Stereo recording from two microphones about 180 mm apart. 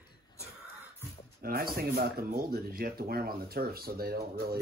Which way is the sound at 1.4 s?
55° right (ahead or behind).